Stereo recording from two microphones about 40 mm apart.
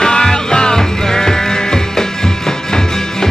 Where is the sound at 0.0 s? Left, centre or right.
Centre.